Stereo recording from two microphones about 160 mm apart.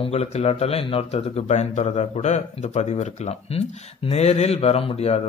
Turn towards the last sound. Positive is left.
turn(degrees=40)  # may be behind; listen again after turning